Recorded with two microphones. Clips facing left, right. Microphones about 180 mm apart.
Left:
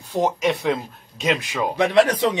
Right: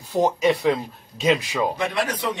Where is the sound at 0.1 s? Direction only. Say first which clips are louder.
Right 1 dB; centre (ahead or behind).